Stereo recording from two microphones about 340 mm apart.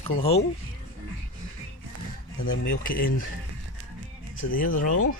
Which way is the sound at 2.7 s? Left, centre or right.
Left.